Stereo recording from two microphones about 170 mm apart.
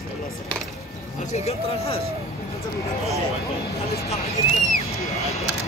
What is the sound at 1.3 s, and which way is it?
Speech, 35° left (ahead or behind).